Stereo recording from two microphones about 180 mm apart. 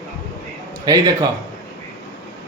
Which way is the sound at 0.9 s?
20° right (ahead or behind).